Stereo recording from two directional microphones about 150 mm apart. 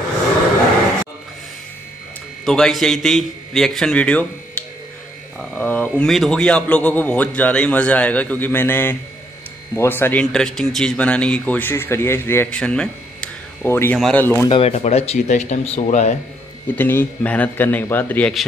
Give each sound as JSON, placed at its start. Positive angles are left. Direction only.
{"t": 2.4, "sound": "a man's voice", "side_deg": 5}
{"t": 5.4, "sound": "a man's voice", "side_deg": 10}
{"t": 12.5, "sound": "a sound", "side_deg": 5}
{"t": 13.9, "sound": "a man's voice", "side_deg": 5}
{"t": 14.2, "sound": "a man's voice", "side_deg": 15}
{"t": 14.5, "sound": "speech", "side_deg": 45}
{"t": 16.7, "sound": "a man's voice", "side_deg": 15}